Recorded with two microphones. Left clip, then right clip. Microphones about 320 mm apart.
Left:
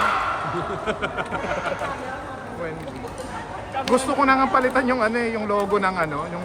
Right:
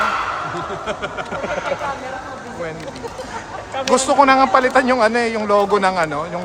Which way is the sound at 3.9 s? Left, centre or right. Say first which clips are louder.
Right 6 dB; centre.